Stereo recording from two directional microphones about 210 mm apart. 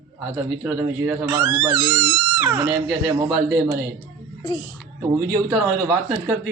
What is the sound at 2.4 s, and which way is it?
Speech, 10° right (ahead or behind).